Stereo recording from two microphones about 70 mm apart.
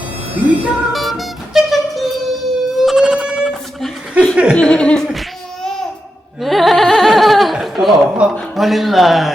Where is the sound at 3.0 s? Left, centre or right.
Centre.